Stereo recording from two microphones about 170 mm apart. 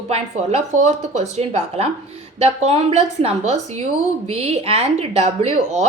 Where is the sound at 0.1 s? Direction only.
45° right (ahead or behind).